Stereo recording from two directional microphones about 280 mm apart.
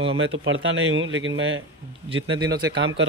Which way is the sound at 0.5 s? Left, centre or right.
Right.